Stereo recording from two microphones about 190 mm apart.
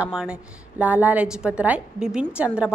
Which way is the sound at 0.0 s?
5° right (ahead or behind).